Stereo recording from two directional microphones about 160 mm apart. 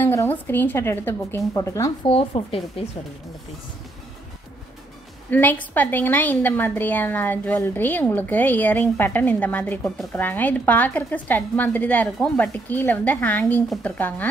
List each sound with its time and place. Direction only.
0.0 s a woman's voice: 15° left (ahead or behind)
2.0 s speech: 35° left (ahead or behind)
5.3 s a woman's voice: 10° left (ahead or behind)